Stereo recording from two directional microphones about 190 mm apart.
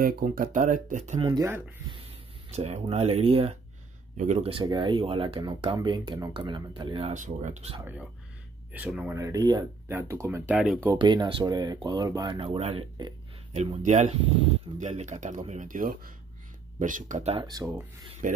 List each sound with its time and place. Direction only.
0.0 s speech: 50° right (ahead or behind)
1.2 s speech: 20° right (ahead or behind)
2.5 s speech: 35° right (ahead or behind)
7.2 s speech: 40° right (ahead or behind)
8.7 s speech: 5° right (ahead or behind)
9.2 s speech: 20° right (ahead or behind)
10.9 s speech: 25° right (ahead or behind)
17.5 s speech: 20° right (ahead or behind)
18.2 s speech: 45° right (ahead or behind)